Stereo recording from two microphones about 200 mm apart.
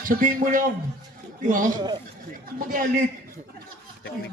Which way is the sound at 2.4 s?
45° right (ahead or behind).